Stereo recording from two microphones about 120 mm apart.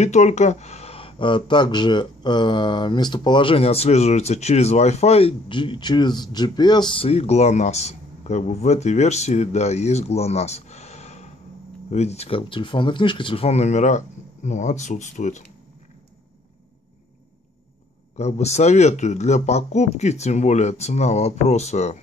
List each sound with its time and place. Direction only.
0.0 s speech: 70° left (ahead or behind)
18.1 s speech: 65° left (ahead or behind)